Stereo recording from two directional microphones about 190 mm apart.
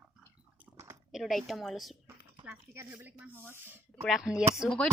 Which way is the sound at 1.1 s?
Centre (ahead or behind).